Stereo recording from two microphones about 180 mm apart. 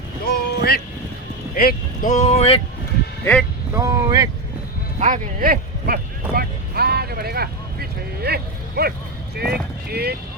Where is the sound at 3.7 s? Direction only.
20° right (ahead or behind).